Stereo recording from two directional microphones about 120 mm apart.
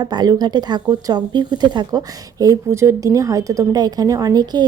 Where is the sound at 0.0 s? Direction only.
35° right (ahead or behind).